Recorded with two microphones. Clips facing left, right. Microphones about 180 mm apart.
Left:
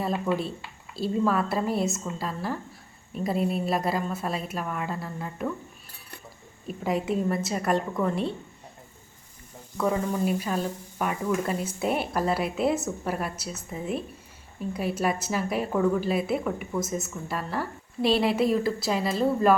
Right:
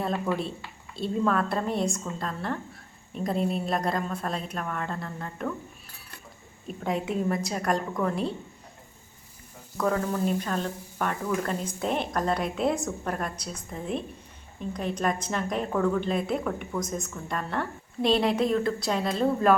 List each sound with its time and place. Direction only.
0.9 s a woman's voice: centre (ahead or behind)
6.7 s a woman's voice: centre (ahead or behind)
9.7 s a woman's voice: 5° left (ahead or behind)